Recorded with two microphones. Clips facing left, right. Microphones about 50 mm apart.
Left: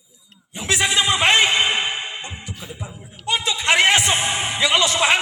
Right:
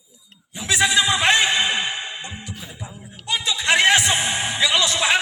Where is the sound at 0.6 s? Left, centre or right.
Left.